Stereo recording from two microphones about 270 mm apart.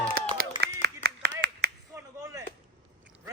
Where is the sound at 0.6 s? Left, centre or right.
Right.